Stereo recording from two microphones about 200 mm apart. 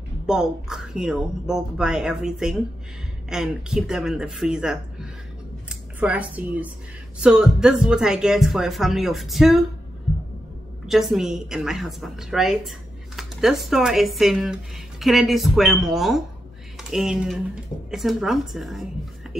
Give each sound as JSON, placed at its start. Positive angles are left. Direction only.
{"t": 0.3, "sound": "a woman's voice", "side_deg": -5}
{"t": 10.9, "sound": "a woman's voice", "side_deg": 0}